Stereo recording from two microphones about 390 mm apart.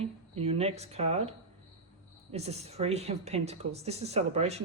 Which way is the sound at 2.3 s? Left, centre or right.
Centre.